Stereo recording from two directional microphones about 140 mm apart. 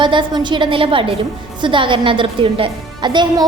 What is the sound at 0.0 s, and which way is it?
A woman's voice, 35° right (ahead or behind).